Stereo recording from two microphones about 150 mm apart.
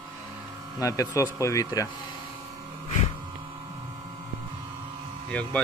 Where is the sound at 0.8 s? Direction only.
20° left (ahead or behind).